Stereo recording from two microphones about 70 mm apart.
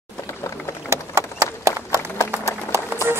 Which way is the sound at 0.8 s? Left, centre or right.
Right.